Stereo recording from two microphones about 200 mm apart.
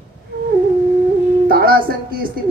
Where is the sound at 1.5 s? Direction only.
50° right (ahead or behind).